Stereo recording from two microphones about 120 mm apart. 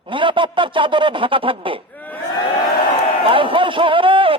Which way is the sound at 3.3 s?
45° right (ahead or behind).